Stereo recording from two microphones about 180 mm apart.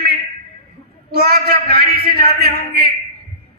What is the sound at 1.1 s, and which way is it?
Speech, 60° right (ahead or behind).